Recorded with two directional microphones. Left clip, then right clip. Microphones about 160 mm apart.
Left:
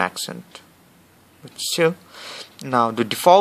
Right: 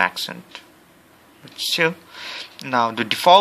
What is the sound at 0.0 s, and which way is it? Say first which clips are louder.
Speech: right 3 dB; 50° left (ahead or behind).